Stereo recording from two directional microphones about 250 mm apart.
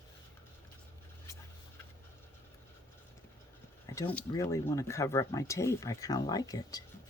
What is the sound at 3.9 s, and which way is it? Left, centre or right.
Speech, centre.